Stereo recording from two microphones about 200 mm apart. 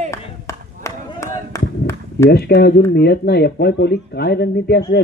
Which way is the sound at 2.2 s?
55° left (ahead or behind).